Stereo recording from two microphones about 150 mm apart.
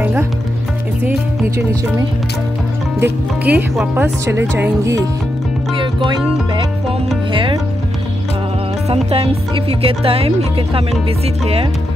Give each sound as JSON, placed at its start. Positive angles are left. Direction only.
{"t": 0.0, "sound": "music", "side_deg": -10}
{"t": 3.0, "sound": "speech", "side_deg": -10}
{"t": 6.0, "sound": "speech", "side_deg": -30}
{"t": 8.8, "sound": "speech", "side_deg": -40}